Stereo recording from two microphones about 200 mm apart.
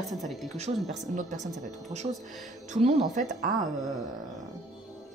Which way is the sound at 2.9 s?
Centre (ahead or behind).